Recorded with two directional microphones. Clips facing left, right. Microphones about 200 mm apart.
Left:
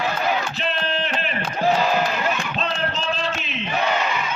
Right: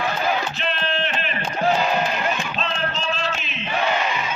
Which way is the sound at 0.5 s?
40° left (ahead or behind).